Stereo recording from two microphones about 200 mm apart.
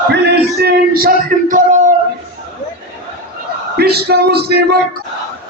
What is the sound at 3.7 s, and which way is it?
Speech, 50° right (ahead or behind).